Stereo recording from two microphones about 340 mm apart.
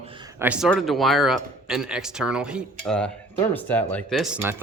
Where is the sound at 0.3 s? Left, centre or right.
Centre.